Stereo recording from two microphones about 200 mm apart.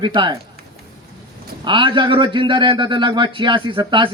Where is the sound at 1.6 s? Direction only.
25° right (ahead or behind).